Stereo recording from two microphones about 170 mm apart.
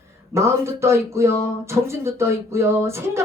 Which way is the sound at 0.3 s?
15° right (ahead or behind).